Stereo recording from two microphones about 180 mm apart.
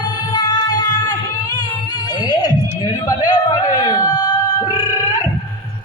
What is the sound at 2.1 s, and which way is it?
Music, 20° left (ahead or behind).